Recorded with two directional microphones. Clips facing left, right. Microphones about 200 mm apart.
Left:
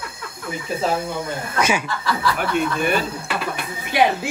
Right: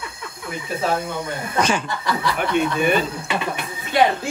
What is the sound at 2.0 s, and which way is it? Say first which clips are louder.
Speech: left 1 dB; 20° right (ahead or behind).